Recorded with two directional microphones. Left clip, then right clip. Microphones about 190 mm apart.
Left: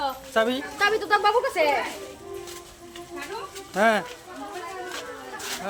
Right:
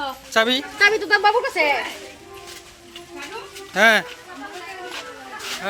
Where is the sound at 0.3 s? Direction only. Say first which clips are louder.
Right 5 dB; 5° right (ahead or behind).